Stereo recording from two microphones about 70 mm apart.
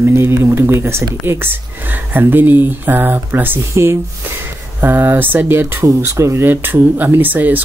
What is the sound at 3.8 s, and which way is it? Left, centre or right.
Speech, right.